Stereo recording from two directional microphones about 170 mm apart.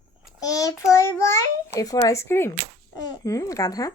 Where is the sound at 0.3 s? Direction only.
20° left (ahead or behind).